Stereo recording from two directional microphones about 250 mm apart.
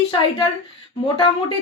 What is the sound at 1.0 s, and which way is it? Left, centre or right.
Speech, left.